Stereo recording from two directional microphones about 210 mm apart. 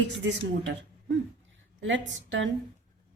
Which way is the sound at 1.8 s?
60° right (ahead or behind).